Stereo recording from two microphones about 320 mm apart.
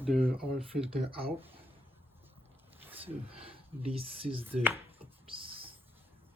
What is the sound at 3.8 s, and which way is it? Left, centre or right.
Speech, centre.